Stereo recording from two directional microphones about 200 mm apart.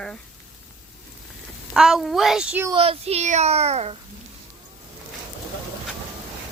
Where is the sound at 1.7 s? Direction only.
Centre (ahead or behind).